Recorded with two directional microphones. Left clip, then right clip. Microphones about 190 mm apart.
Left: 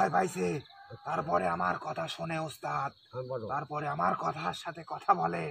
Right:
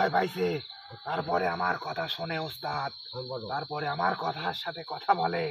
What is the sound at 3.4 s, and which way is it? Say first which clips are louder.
Speech: right 4 dB; 35° left (ahead or behind).